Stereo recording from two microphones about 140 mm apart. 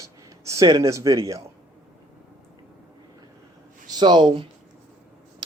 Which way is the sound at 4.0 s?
30° right (ahead or behind).